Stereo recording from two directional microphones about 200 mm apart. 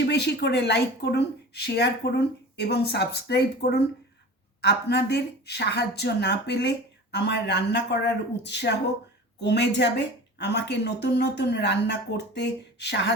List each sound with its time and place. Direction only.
0.0 s speech: 55° left (ahead or behind)